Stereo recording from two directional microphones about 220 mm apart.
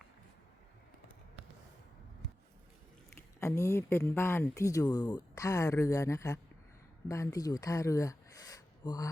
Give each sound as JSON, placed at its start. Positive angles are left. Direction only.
{"t": 3.4, "sound": "speech", "side_deg": 10}